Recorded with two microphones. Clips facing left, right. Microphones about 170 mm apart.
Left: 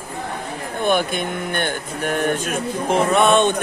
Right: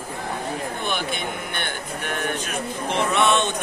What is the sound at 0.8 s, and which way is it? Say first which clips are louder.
A man's voice: left 11 dB; 50° left (ahead or behind).